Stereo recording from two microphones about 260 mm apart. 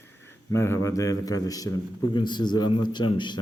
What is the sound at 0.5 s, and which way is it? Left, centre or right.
Speech, centre.